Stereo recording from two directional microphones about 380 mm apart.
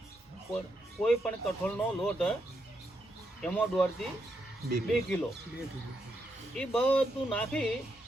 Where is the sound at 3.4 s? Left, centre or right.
Centre.